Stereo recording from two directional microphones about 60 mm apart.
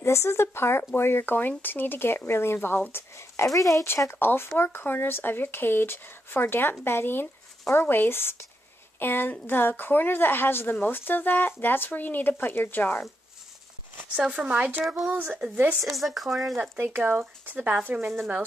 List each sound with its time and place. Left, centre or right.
0.0 s speech: left
3.4 s speech: left
4.1 s speech: left
14.4 s speech: right
15.8 s speech: centre
16.7 s speech: right